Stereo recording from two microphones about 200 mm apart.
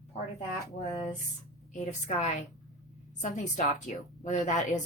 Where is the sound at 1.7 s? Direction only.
35° left (ahead or behind).